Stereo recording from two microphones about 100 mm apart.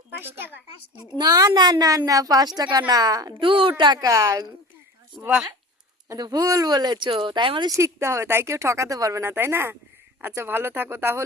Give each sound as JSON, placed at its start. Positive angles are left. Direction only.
{"t": 0.1, "sound": "a woman's voice", "side_deg": -20}
{"t": 1.2, "sound": "a woman's voice", "side_deg": -40}
{"t": 3.4, "sound": "speech", "side_deg": -60}
{"t": 6.1, "sound": "speech", "side_deg": -40}
{"t": 7.7, "sound": "speech", "side_deg": -30}
{"t": 9.2, "sound": "speech", "side_deg": -20}